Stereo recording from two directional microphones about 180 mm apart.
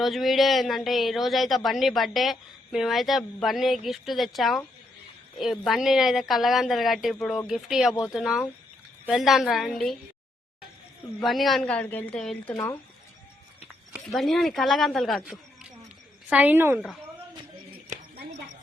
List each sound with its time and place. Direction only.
0.0 s speech: centre (ahead or behind)
11.2 s speech: centre (ahead or behind)
13.9 s a woman's voice: centre (ahead or behind)